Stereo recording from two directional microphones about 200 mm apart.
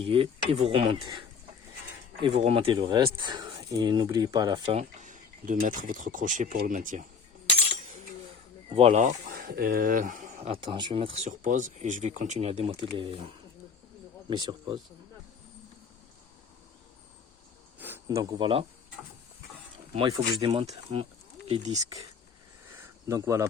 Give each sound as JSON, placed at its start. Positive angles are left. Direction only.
{"t": 0.0, "sound": "speech", "side_deg": -25}
{"t": 2.2, "sound": "speech", "side_deg": -30}
{"t": 8.7, "sound": "speech", "side_deg": -35}
{"t": 10.5, "sound": "speech", "side_deg": -25}
{"t": 17.7, "sound": "speech", "side_deg": -10}
{"t": 20.1, "sound": "speech", "side_deg": -25}
{"t": 23.0, "sound": "speech", "side_deg": -15}